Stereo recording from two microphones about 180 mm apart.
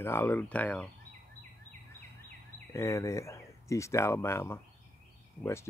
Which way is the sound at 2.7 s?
15° left (ahead or behind).